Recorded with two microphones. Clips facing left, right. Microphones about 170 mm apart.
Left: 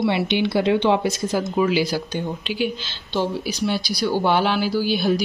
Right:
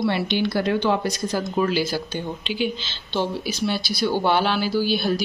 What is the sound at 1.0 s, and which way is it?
Speech, 5° left (ahead or behind).